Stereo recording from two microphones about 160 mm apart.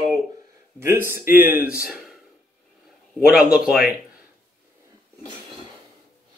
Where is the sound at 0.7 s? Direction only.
15° right (ahead or behind).